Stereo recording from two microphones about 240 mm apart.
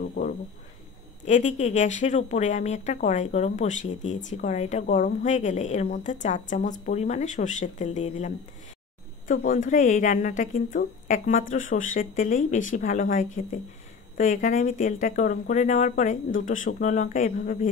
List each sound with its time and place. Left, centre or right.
0.0 s speech: left
9.3 s speech: left